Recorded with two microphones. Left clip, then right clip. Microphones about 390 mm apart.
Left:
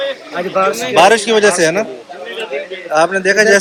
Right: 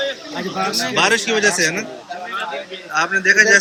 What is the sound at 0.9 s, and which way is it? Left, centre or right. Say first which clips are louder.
Speech: left 8 dB; centre.